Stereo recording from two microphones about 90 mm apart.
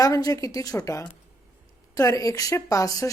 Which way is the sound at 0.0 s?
40° left (ahead or behind).